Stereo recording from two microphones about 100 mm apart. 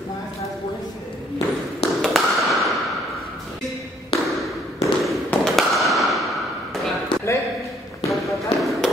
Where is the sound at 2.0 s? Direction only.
Centre (ahead or behind).